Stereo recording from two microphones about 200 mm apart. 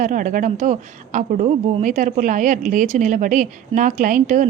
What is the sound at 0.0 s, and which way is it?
A woman's voice, 40° right (ahead or behind).